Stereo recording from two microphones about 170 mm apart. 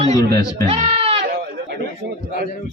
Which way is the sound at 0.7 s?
35° right (ahead or behind).